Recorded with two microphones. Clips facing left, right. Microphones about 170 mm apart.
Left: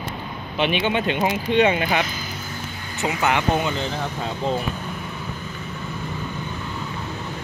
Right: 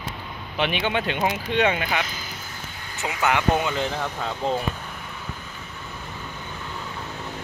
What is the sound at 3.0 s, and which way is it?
Speech, 20° left (ahead or behind).